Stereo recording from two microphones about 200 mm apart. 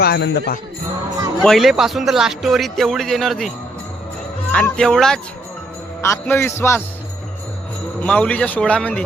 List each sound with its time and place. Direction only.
0.0 s jingle bell: 55° left (ahead or behind)
1.4 s speech: centre (ahead or behind)
4.5 s a man's voice: 5° left (ahead or behind)
8.0 s speech: 5° left (ahead or behind)